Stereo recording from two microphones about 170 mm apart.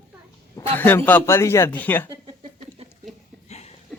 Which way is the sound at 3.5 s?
40° left (ahead or behind).